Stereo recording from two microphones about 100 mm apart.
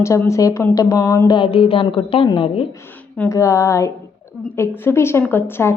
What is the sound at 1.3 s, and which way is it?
A woman's voice, 60° left (ahead or behind).